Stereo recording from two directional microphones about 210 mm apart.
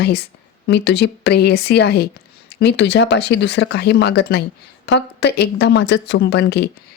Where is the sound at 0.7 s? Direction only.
55° left (ahead or behind).